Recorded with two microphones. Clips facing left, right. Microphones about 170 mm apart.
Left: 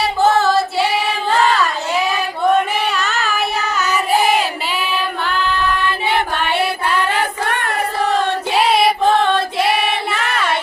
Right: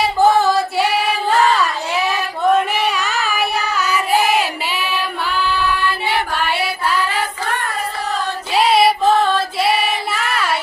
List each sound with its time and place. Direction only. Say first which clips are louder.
0.2 s singing: even; 15° right (ahead or behind)
2.9 s child singing: left 1 dB; 10° right (ahead or behind)
5.2 s singing: right 1 dB; 5° right (ahead or behind)
6.5 s music: left 2 dB; 5° right (ahead or behind)
7.1 s child singing: left 2 dB; 65° left (ahead or behind)
8.8 s child singing: even; 5° right (ahead or behind)